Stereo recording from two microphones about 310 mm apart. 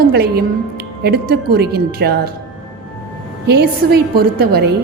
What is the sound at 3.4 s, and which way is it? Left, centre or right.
A woman's voice, right.